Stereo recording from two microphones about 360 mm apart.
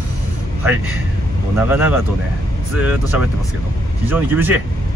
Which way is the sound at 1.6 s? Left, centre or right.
Centre.